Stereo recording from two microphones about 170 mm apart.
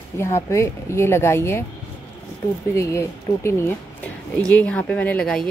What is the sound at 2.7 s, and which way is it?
Speech, 15° left (ahead or behind).